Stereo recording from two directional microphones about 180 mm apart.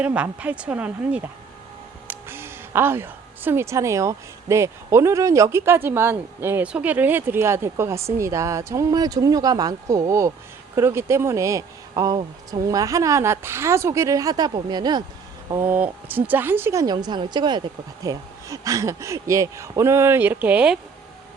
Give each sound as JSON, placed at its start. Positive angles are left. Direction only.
{"t": 0.0, "sound": "speech", "side_deg": -5}